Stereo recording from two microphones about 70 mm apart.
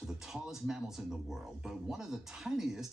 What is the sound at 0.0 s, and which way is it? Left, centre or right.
Speech, centre.